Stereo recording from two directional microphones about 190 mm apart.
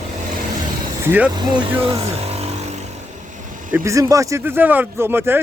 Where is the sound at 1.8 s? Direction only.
30° right (ahead or behind).